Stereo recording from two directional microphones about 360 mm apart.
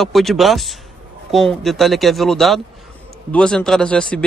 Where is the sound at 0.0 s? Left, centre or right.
Centre.